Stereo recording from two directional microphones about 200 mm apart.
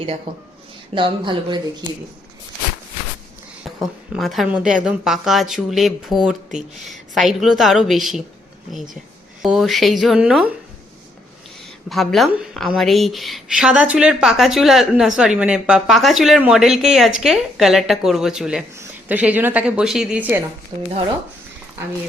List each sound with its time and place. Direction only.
0.9 s speech: 25° right (ahead or behind)
3.6 s a woman's voice: centre (ahead or behind)
9.4 s a woman's voice: centre (ahead or behind)
11.6 s a woman's voice: centre (ahead or behind)
20.7 s speech: 30° right (ahead or behind)